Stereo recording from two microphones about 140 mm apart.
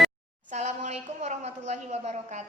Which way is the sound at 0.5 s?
55° right (ahead or behind).